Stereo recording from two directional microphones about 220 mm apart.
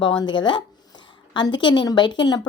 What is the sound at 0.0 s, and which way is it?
A woman's voice, 20° left (ahead or behind).